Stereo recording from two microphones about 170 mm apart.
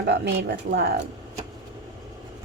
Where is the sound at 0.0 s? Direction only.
80° right.